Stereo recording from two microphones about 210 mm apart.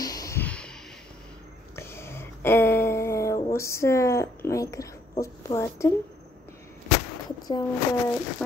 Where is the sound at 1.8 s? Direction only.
10° left (ahead or behind).